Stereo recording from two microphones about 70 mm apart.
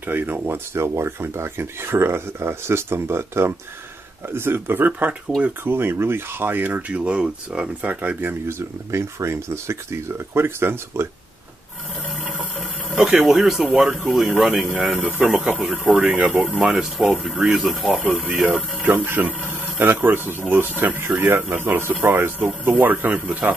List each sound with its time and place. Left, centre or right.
0.0 s speech: right
13.2 s speech: centre
15.9 s speech: centre
16.5 s speech: centre
17.3 s speech: centre
17.6 s speech: centre
18.2 s speech: centre